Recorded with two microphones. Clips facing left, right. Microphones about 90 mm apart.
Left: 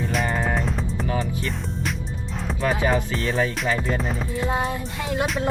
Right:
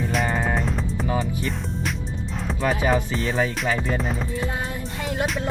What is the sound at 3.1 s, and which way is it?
Music, 30° right (ahead or behind).